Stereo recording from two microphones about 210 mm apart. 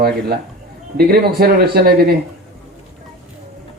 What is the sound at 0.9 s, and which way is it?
Speech, 50° right (ahead or behind).